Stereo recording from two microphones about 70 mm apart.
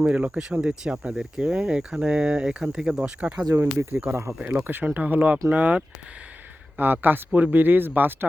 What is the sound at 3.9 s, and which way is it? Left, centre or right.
Speech, right.